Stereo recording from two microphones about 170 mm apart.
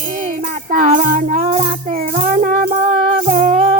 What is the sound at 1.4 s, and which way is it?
Music, 35° right (ahead or behind).